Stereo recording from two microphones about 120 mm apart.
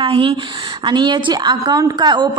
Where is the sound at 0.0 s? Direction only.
45° right (ahead or behind).